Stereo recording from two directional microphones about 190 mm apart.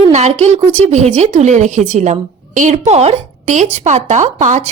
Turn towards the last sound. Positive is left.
turn(degrees=-40)  # may be behind; listen again after turning